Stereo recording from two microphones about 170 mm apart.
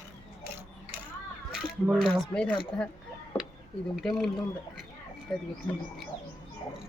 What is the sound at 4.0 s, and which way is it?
Speech, centre (ahead or behind).